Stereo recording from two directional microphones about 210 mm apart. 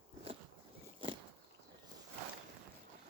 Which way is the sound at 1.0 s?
25° right (ahead or behind).